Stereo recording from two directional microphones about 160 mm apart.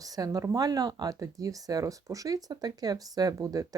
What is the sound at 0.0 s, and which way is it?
Speech, 25° right (ahead or behind).